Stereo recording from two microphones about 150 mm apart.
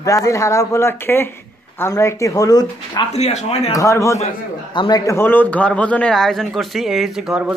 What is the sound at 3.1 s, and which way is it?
Speech, 45° left (ahead or behind).